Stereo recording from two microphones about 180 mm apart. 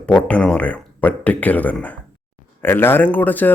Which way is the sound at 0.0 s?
5° left (ahead or behind).